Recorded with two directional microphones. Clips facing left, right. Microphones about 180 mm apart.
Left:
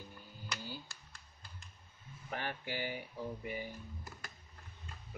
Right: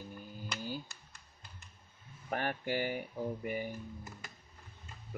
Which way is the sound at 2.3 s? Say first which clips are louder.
Right 6 dB; 50° right (ahead or behind).